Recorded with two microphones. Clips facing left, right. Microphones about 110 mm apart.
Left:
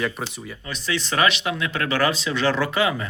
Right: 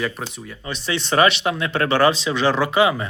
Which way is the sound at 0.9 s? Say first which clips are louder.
Right 4 dB; 35° right (ahead or behind).